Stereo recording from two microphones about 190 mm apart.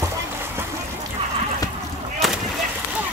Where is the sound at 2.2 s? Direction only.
Centre (ahead or behind).